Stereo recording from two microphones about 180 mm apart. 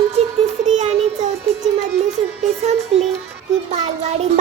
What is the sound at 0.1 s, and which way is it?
Child singing, 40° right (ahead or behind).